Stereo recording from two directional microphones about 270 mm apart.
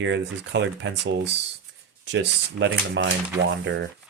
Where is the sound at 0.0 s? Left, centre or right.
Right.